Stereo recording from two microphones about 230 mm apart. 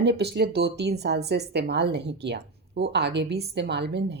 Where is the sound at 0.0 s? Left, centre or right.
Right.